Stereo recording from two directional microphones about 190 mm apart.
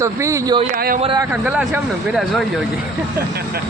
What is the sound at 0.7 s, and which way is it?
Speech, 50° right (ahead or behind).